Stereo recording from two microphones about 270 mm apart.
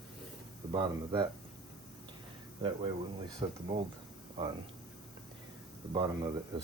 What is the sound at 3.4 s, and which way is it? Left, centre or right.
Speech, right.